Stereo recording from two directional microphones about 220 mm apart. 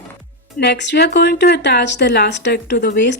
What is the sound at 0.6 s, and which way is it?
Speech, 50° left (ahead or behind).